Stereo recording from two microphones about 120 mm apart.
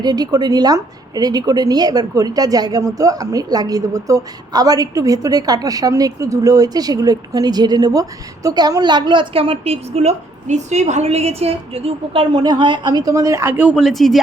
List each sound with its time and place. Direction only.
0.0 s a woman's voice: 35° right (ahead or behind); by 12.2 s 55° right (ahead or behind)
12.3 s speech: 35° right (ahead or behind); by 14.2 s centre (ahead or behind)